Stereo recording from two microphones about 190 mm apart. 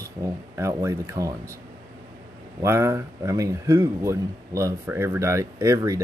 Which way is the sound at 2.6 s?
15° right (ahead or behind).